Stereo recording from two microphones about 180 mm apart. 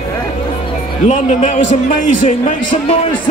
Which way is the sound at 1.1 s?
40° left (ahead or behind).